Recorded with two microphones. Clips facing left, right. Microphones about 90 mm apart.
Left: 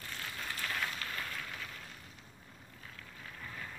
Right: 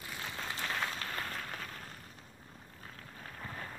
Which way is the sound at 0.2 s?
25° right (ahead or behind).